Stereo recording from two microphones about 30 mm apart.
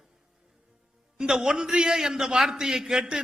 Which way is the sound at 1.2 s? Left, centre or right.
Centre.